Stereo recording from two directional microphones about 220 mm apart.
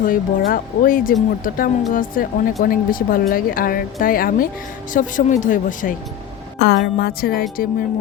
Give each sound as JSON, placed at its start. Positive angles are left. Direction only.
{"t": 0.0, "sound": "speech", "side_deg": 40}
{"t": 6.6, "sound": "a woman's voice", "side_deg": 50}